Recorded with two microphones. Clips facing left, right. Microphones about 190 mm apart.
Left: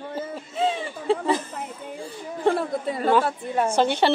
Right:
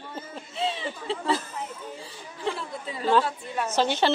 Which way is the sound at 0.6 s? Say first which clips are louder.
Left 5 dB; 45° left (ahead or behind).